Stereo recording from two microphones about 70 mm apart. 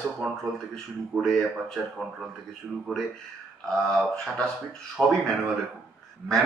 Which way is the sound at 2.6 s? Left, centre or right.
Centre.